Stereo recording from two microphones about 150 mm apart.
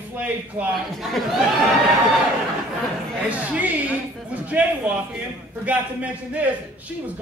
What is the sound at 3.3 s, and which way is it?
A man's voice, 10° right (ahead or behind).